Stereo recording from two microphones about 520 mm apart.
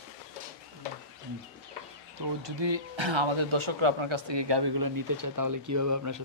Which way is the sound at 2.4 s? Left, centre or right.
Right.